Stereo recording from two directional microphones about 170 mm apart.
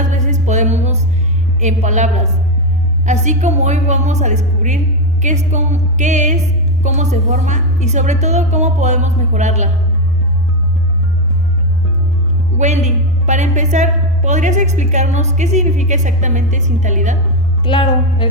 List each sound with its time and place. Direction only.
0.1 s music: 45° right (ahead or behind)
1.6 s a woman's voice: 45° right (ahead or behind)
12.5 s a woman's voice: 45° right (ahead or behind)
17.6 s speech: 30° left (ahead or behind)